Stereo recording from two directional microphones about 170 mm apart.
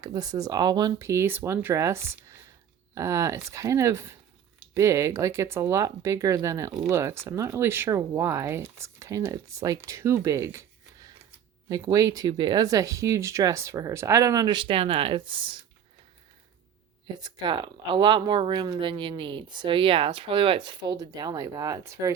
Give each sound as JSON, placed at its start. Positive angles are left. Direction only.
{"t": 0.0, "sound": "speech", "side_deg": -20}
{"t": 11.7, "sound": "speech", "side_deg": -20}
{"t": 17.2, "sound": "speech", "side_deg": -25}